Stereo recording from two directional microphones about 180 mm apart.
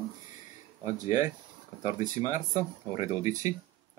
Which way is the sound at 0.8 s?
15° right (ahead or behind).